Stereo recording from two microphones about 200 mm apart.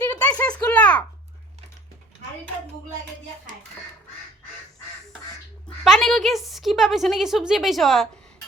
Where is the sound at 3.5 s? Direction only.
40° right (ahead or behind).